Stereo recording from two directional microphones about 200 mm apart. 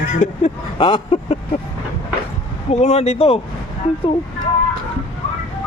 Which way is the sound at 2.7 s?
30° left (ahead or behind).